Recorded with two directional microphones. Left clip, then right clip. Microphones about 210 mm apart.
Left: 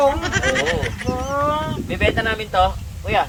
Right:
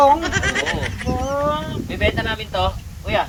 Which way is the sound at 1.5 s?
15° left (ahead or behind).